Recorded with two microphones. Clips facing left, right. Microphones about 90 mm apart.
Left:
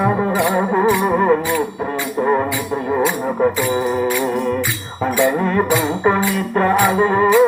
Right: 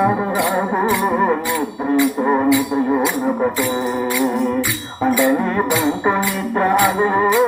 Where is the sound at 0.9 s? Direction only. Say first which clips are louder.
Left 1 dB; 15° left (ahead or behind).